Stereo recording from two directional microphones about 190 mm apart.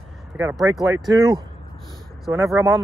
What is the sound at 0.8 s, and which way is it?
Speech, 20° right (ahead or behind).